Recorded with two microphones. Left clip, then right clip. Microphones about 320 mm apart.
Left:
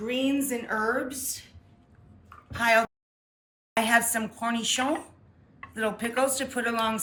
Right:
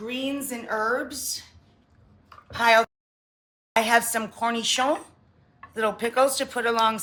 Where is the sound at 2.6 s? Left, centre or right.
Centre.